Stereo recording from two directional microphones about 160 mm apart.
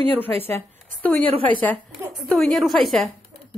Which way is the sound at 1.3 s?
35° right (ahead or behind).